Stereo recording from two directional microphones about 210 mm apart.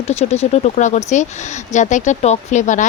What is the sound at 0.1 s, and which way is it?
Speech, 30° left (ahead or behind).